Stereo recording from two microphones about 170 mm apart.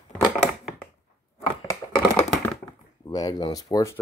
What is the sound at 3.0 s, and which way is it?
Speech, 25° left (ahead or behind).